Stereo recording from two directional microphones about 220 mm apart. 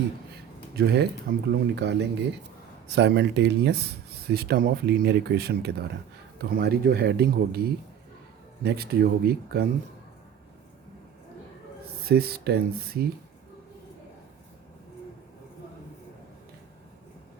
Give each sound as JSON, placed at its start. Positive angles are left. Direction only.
{"t": 0.8, "sound": "speech", "side_deg": -50}
{"t": 1.7, "sound": "speech", "side_deg": -50}
{"t": 12.0, "sound": "speech", "side_deg": -45}